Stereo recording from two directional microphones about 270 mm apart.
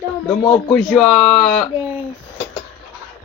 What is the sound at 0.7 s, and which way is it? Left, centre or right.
Speech, centre.